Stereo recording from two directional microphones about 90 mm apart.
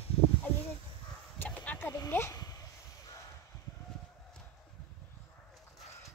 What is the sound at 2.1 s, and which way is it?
Speech, 30° left (ahead or behind).